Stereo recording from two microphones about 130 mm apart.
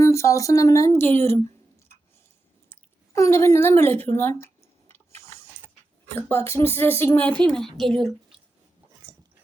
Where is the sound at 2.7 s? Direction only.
20° left (ahead or behind).